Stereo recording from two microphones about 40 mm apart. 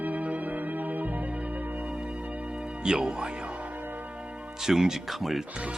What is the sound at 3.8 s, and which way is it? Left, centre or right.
Church bell, right.